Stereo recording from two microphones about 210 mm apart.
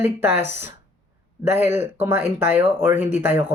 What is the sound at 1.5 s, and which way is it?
Speech, 10° right (ahead or behind).